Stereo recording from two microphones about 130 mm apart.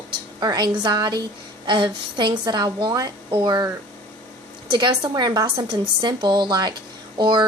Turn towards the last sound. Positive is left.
turn(degrees=-35)  # may be behind; listen again after turning